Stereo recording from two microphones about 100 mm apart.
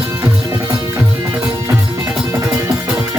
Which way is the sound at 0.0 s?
30° right (ahead or behind).